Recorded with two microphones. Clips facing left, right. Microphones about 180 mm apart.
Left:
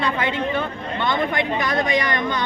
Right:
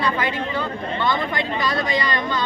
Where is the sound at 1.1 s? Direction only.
20° left (ahead or behind).